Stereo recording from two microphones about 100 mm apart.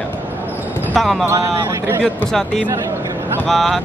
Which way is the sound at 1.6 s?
20° right (ahead or behind).